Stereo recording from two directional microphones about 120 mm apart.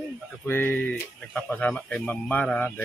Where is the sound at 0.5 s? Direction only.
20° left (ahead or behind).